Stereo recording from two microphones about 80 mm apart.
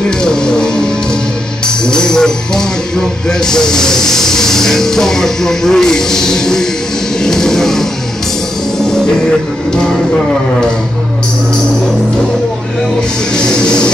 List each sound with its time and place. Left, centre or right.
0.2 s music: centre
1.9 s music: centre
13.3 s music: centre